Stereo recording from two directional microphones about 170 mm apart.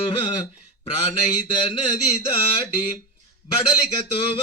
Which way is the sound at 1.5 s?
30° left (ahead or behind).